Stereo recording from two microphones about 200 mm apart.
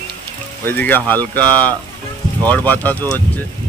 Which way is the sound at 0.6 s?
10° left (ahead or behind).